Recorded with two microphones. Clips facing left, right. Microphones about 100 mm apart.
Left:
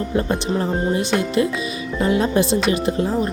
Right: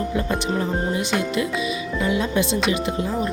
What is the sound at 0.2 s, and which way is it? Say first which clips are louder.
Speech: left 4 dB; 35° left (ahead or behind).